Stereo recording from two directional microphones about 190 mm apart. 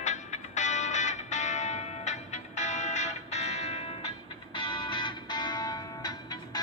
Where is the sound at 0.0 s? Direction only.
40° left (ahead or behind).